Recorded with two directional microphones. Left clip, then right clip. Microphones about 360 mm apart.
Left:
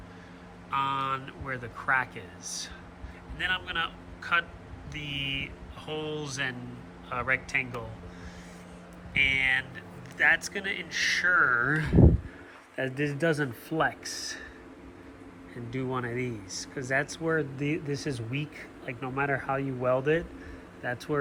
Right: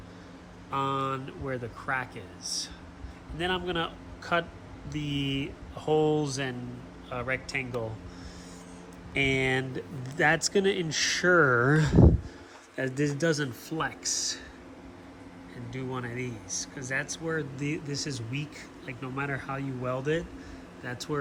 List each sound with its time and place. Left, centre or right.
0.7 s speech: centre
9.1 s speech: centre
12.7 s speech: centre
15.7 s speech: centre